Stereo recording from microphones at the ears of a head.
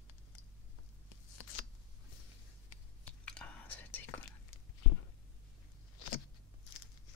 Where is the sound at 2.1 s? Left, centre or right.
Left.